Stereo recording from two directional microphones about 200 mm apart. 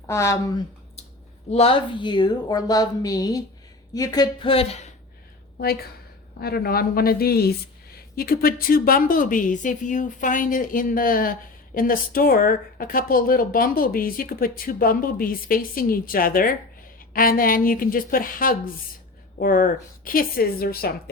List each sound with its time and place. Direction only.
0.1 s speech: 15° left (ahead or behind)
1.5 s speech: 30° left (ahead or behind)
6.4 s a woman's voice: 50° left (ahead or behind)